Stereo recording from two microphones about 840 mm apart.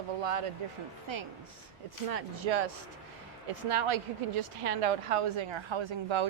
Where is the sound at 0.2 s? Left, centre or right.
Right.